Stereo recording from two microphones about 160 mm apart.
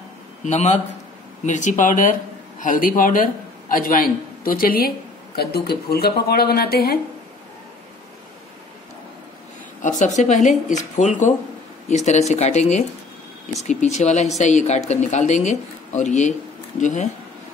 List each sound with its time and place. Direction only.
0.5 s a man's voice: 45° left (ahead or behind); by 7.0 s 75° left (ahead or behind)
9.8 s speech: 50° left (ahead or behind)